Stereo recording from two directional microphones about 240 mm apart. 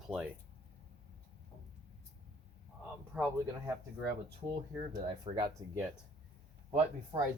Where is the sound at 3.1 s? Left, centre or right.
Centre.